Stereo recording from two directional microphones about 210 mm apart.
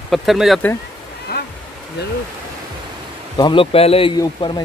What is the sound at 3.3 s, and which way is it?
Speech, 25° left (ahead or behind).